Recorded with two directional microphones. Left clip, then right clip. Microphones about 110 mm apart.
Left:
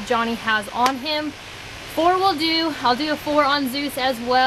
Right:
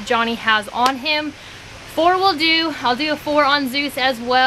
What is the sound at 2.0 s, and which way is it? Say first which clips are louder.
Speech: right 3 dB; 10° right (ahead or behind).